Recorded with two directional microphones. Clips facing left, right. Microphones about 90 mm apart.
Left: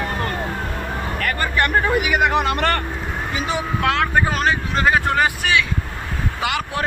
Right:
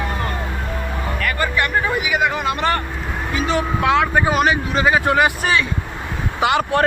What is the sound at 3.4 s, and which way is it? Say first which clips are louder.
Speech: right 5 dB; 15° left (ahead or behind).